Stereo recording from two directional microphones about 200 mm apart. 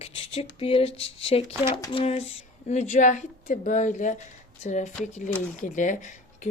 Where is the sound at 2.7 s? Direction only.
35° left (ahead or behind).